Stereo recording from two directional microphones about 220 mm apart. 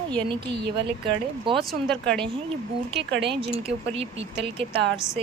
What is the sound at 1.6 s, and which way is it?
Speech, centre (ahead or behind).